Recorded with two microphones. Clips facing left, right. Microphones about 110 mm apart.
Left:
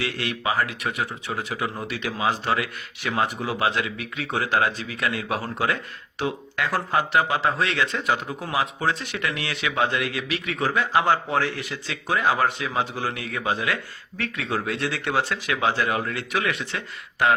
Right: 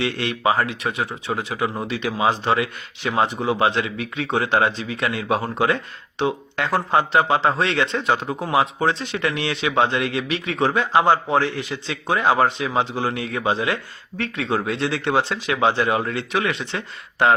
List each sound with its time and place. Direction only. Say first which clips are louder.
0.0 s speech: right 6 dB; 25° right (ahead or behind)